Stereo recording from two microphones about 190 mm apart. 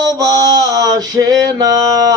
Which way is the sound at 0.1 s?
20° right (ahead or behind).